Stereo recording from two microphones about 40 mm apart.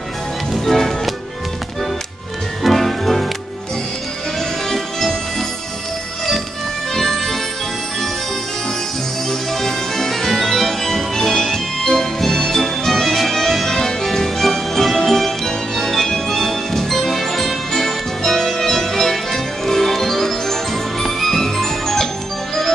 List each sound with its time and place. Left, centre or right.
0.5 s music: centre
2.6 s music: centre
4.4 s music: centre
6.9 s music: centre
9.3 s music: centre